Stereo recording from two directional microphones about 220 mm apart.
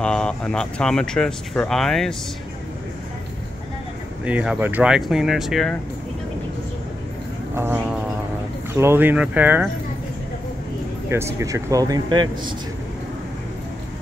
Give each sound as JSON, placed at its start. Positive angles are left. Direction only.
{"t": 0.0, "sound": "speech", "side_deg": 5}
{"t": 4.2, "sound": "speech", "side_deg": -5}
{"t": 7.5, "sound": "speech", "side_deg": -10}
{"t": 11.1, "sound": "speech", "side_deg": -10}